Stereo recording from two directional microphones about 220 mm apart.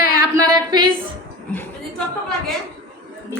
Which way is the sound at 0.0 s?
90° right.